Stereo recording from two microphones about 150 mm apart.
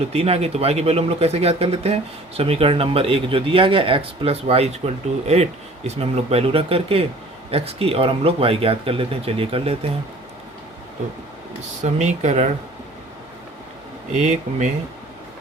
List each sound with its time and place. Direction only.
0.1 s speech: 40° right (ahead or behind)
11.8 s speech: 50° right (ahead or behind)
14.2 s speech: 50° right (ahead or behind)